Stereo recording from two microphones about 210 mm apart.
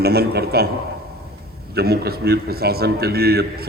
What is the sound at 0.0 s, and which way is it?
Speech, 50° right (ahead or behind).